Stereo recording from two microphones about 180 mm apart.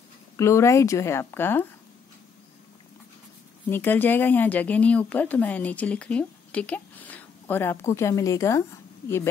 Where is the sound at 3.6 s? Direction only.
10° left (ahead or behind).